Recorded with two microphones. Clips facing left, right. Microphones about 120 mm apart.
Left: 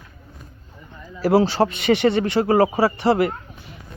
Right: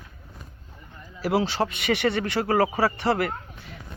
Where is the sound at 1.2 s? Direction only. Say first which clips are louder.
Left 7 dB; 35° left (ahead or behind).